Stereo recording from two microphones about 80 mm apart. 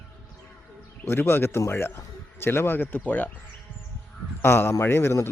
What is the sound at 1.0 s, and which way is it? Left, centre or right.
A man's voice, left.